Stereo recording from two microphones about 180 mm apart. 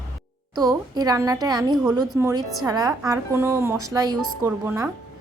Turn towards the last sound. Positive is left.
turn(degrees=-15)  # may be behind; listen again after turning